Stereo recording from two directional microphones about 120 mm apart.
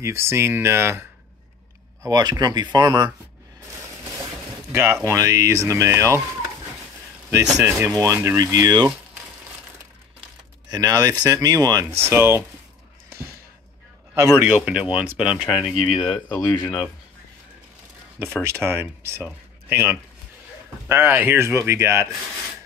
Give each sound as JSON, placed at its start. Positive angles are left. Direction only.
{"t": 0.0, "sound": "speech", "side_deg": -25}
{"t": 2.0, "sound": "speech", "side_deg": -30}
{"t": 5.0, "sound": "speech", "side_deg": -25}
{"t": 7.5, "sound": "speech", "side_deg": -25}
{"t": 10.7, "sound": "speech", "side_deg": -30}
{"t": 14.1, "sound": "a man's voice", "side_deg": -25}
{"t": 14.4, "sound": "speech", "side_deg": -10}
{"t": 16.0, "sound": "speech", "side_deg": 25}
{"t": 18.2, "sound": "speech", "side_deg": -20}